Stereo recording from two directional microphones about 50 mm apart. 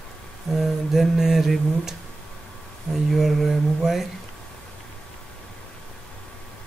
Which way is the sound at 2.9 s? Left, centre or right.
Centre.